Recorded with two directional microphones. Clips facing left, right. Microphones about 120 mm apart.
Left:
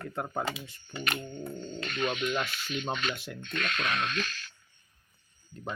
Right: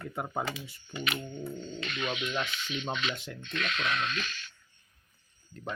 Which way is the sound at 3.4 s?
45° left (ahead or behind).